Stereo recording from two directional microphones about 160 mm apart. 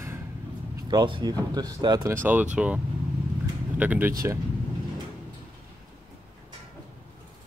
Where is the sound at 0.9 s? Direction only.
25° right (ahead or behind).